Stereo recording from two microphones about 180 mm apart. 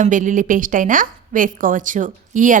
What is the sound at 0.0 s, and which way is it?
A woman's voice, 45° right (ahead or behind).